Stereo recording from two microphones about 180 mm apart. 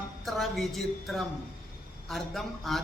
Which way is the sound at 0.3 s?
Centre (ahead or behind).